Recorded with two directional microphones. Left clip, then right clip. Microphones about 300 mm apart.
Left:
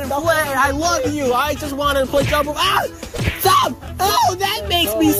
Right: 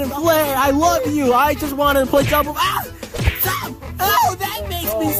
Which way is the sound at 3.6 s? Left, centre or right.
Centre.